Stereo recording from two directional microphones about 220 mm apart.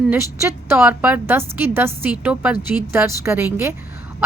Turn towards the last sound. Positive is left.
turn(degrees=-10)  # may be behind; listen again after turning